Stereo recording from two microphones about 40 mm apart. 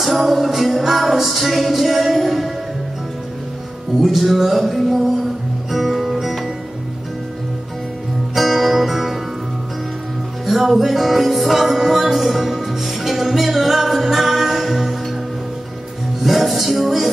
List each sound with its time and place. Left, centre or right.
0.0 s music: centre
4.0 s music: centre
8.4 s music: centre
10.4 s music: centre
16.2 s music: centre